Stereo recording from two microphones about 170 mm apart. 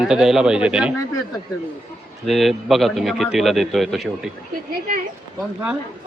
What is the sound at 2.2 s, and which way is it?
A man's voice, centre (ahead or behind).